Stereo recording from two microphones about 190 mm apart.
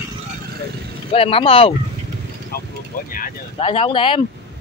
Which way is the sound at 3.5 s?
30° left (ahead or behind).